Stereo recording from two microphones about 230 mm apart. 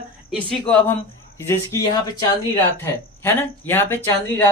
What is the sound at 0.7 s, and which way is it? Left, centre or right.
Speech, centre.